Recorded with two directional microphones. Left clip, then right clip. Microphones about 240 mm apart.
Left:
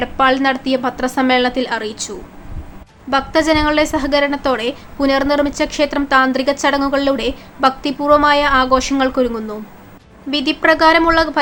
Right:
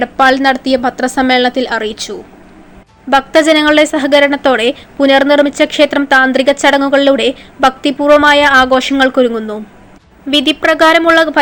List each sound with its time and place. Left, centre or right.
0.0 s a woman's voice: centre
3.1 s a woman's voice: centre